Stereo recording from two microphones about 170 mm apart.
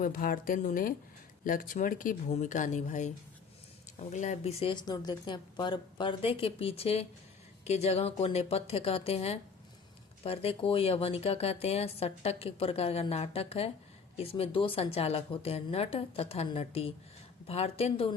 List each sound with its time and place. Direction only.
0.0 s speech: 55° left (ahead or behind)
4.7 s speech: 25° left (ahead or behind)